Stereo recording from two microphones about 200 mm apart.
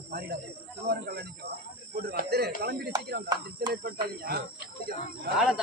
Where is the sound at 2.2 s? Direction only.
55° right (ahead or behind).